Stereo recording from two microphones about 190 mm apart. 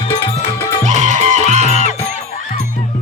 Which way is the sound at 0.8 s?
40° right (ahead or behind).